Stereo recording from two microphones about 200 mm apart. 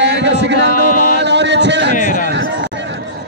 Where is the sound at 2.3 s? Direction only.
60° right (ahead or behind).